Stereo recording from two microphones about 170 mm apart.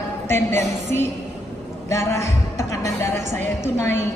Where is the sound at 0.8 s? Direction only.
40° right (ahead or behind).